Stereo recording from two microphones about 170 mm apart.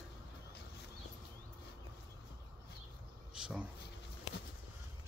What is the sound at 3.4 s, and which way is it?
Speech, 5° right (ahead or behind).